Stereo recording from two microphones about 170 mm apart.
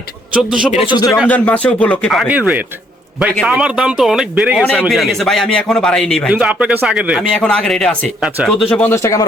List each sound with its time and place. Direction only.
0.3 s a man's voice: 5° right (ahead or behind)
0.7 s speech: 35° left (ahead or behind)
0.9 s speech: 20° left (ahead or behind)
1.3 s a man's voice: 10° left (ahead or behind)
6.3 s a man's voice: 10° right (ahead or behind); by 9.2 s 15° left (ahead or behind)